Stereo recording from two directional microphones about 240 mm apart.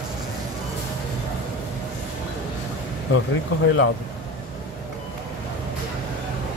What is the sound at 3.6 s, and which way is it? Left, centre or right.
Speech, left.